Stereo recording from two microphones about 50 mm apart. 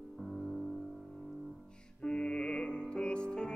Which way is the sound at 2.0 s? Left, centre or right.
Centre.